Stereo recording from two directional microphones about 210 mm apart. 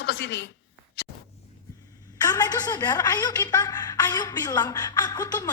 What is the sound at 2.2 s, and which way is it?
A woman's voice, 20° left (ahead or behind).